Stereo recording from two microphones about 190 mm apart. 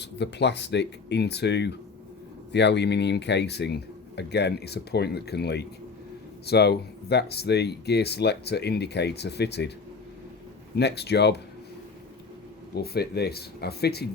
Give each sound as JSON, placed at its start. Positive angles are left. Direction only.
{"t": 0.0, "sound": "speech", "side_deg": 65}
{"t": 10.8, "sound": "speech", "side_deg": 60}
{"t": 12.7, "sound": "speech", "side_deg": 55}